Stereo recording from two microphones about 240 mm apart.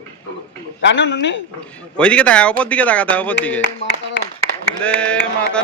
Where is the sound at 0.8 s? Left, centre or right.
Left.